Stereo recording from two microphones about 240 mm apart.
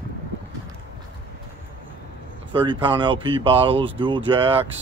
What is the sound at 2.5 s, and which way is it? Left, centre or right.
Speech, centre.